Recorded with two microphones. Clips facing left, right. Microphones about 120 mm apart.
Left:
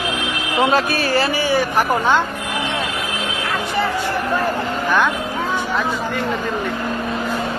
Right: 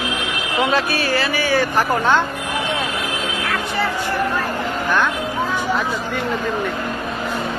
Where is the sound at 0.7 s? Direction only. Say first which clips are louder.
Left 2 dB; 40° left (ahead or behind).